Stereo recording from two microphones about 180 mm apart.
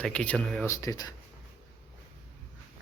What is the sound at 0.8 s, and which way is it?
Speech, 20° left (ahead or behind).